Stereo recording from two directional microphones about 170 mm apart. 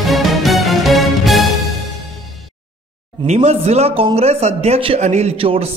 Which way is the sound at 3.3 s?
40° right (ahead or behind).